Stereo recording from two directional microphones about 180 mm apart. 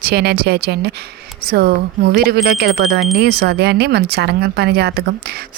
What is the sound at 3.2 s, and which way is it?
Speech, 65° right (ahead or behind).